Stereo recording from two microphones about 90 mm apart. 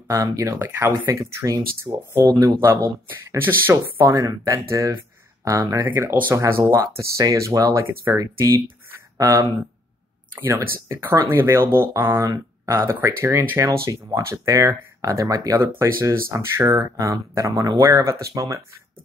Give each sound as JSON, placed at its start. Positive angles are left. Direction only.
{"t": 0.1, "sound": "speech", "side_deg": -35}
{"t": 1.9, "sound": "speech", "side_deg": -45}
{"t": 4.1, "sound": "speech", "side_deg": -40}
{"t": 5.9, "sound": "speech", "side_deg": -25}
{"t": 10.3, "sound": "speech", "side_deg": -25}